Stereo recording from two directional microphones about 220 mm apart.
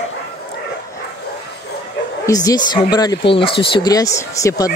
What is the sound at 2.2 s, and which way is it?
Speech, 15° left (ahead or behind).